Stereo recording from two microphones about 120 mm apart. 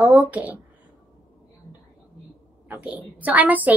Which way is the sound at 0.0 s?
15° right (ahead or behind).